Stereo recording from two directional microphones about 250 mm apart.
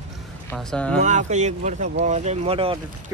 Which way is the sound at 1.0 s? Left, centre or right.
Right.